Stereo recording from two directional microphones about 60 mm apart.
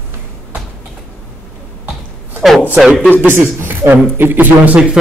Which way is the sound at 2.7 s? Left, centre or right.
Centre.